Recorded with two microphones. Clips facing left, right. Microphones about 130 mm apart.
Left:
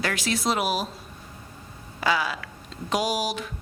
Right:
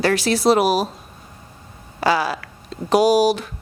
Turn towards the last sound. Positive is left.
turn(degrees=-35)  # may be behind; listen again after turning